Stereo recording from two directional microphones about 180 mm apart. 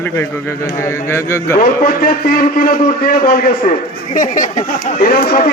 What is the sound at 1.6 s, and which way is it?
Speech, 55° left (ahead or behind).